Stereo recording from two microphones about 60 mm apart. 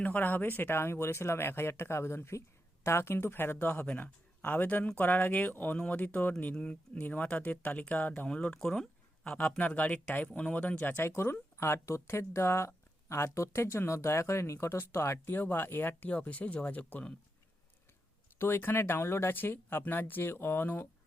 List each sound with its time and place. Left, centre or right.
0.0 s speech: left
8.5 s speech: centre
9.6 s speech: left
11.0 s speech: left
15.4 s speech: left
18.3 s speech: left